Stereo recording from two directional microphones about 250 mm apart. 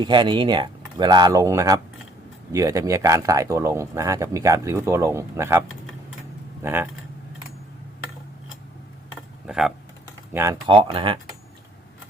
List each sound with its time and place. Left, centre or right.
0.0 s speech: centre
9.5 s speech: centre
10.3 s speech: centre